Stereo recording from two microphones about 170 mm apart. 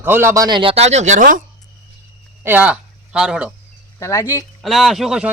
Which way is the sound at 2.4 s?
10° right (ahead or behind).